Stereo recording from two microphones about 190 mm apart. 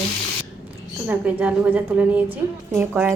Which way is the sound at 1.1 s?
10° right (ahead or behind).